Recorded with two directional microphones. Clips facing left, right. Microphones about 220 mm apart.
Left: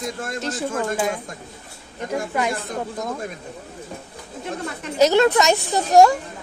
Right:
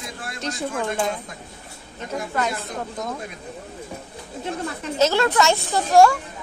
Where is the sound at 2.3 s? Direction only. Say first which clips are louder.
Left 1 dB; 15° left (ahead or behind).